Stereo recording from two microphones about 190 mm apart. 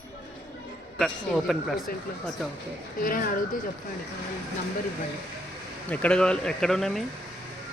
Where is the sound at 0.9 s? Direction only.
Centre (ahead or behind).